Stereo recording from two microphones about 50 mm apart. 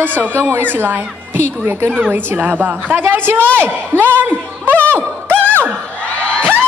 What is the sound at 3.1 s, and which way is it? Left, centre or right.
Speech, right.